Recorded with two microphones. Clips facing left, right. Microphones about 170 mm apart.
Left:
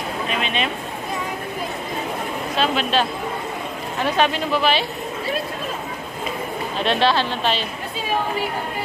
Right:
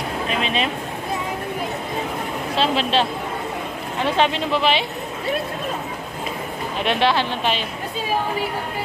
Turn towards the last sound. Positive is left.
turn(degrees=-15)  # may be behind; listen again after turning